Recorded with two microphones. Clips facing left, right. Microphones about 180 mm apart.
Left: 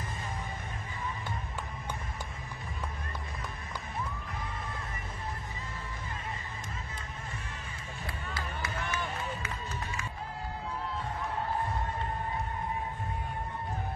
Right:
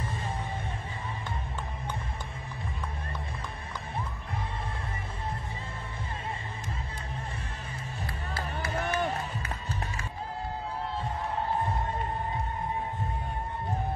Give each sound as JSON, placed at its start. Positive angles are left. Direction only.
{"t": 8.3, "sound": "run", "side_deg": -40}